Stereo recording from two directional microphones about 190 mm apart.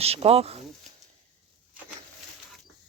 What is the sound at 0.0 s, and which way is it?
Speech, 30° right (ahead or behind).